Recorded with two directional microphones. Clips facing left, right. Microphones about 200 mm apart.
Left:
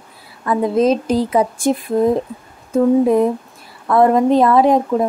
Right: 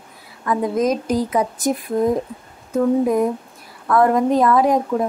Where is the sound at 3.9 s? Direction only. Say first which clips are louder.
Left 3 dB; 25° left (ahead or behind).